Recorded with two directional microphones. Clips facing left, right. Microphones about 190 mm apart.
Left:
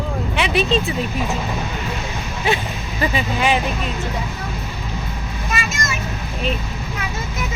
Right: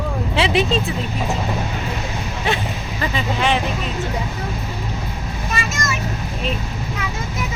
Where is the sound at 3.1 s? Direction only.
5° left (ahead or behind).